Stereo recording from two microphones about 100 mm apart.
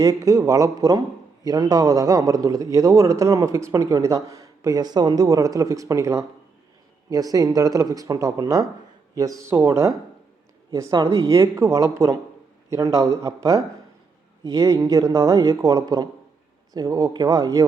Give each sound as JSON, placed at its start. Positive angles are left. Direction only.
{"t": 0.0, "sound": "a man's voice", "side_deg": -35}